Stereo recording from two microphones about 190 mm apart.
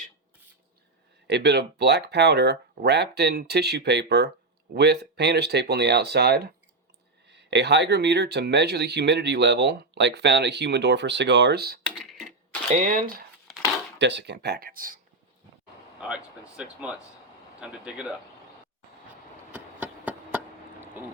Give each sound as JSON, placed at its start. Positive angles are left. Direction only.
{"t": 1.3, "sound": "speech", "side_deg": -60}
{"t": 12.7, "sound": "speech", "side_deg": -45}
{"t": 14.0, "sound": "speech", "side_deg": -65}
{"t": 16.0, "sound": "speech", "side_deg": -5}
{"t": 19.5, "sound": "a sound", "side_deg": -10}